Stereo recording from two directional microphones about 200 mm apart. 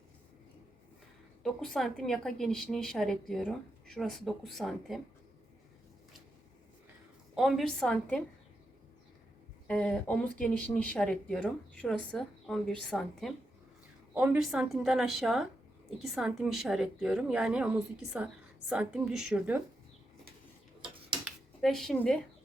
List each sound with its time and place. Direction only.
1.5 s speech: centre (ahead or behind)
7.3 s speech: centre (ahead or behind)
9.6 s speech: 5° left (ahead or behind)
21.2 s a sound: centre (ahead or behind)